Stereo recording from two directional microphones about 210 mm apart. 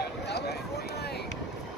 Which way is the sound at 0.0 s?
50° left (ahead or behind).